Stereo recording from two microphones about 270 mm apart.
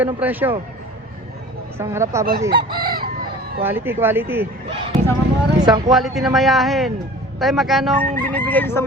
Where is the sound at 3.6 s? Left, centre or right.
Centre.